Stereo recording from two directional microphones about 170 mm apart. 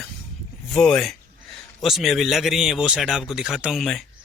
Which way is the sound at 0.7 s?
Centre (ahead or behind).